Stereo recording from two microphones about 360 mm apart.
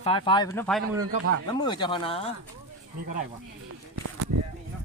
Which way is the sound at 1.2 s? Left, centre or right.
Right.